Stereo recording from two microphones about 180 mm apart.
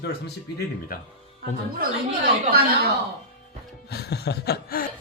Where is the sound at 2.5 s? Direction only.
55° right (ahead or behind).